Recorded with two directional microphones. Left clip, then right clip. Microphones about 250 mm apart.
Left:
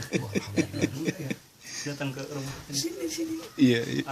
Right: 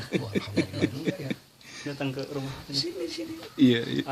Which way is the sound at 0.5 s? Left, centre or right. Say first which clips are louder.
Even; centre.